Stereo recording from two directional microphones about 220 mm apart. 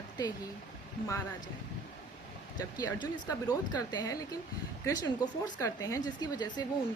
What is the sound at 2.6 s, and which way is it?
A woman's voice, 15° left (ahead or behind).